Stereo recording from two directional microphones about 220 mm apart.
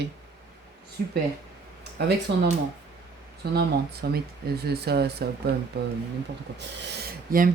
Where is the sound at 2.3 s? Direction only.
50° right (ahead or behind).